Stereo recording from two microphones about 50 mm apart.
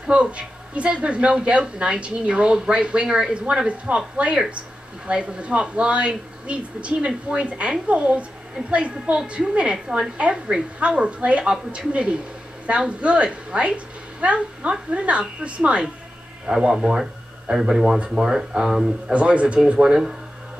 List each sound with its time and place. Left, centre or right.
0.0 s speech: right
16.7 s speech: centre
19.1 s speech: right